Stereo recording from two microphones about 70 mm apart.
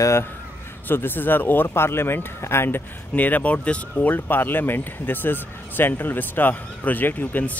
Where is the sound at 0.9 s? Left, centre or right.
Left.